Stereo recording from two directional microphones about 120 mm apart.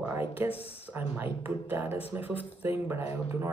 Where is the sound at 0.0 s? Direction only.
15° right (ahead or behind).